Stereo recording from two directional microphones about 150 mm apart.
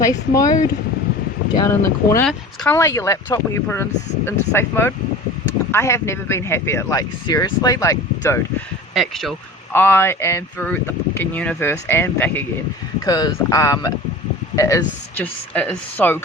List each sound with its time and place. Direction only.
0.0 s speech: 25° left (ahead or behind)
9.0 s speech: centre (ahead or behind)
9.7 s speech: 15° left (ahead or behind)
13.1 s speech: 25° left (ahead or behind)
15.1 s speech: 10° left (ahead or behind)